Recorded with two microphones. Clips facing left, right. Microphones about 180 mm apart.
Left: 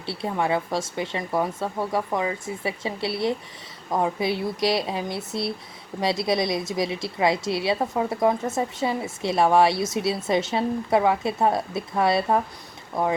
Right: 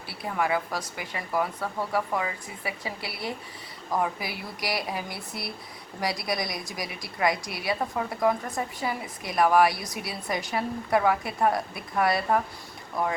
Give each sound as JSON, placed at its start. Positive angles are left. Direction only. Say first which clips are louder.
{"t": 0.0, "sound": "a woman's voice", "louder": "left 3 dB", "side_deg": 25}